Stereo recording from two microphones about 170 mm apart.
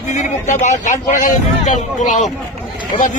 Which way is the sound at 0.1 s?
45° left (ahead or behind).